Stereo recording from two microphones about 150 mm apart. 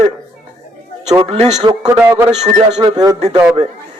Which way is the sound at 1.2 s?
45° right (ahead or behind).